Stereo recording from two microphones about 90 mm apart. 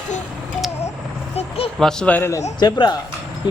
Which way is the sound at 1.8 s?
5° left (ahead or behind).